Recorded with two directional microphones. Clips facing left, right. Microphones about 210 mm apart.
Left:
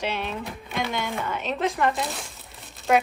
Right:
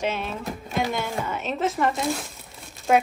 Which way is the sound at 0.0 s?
5° right (ahead or behind).